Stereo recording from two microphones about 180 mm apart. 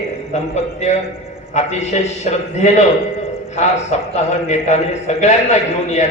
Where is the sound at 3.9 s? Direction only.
40° left (ahead or behind).